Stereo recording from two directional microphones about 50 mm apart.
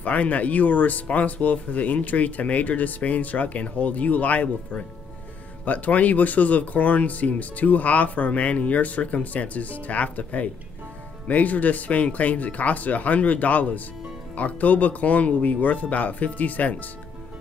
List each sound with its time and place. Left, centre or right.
0.0 s speech: left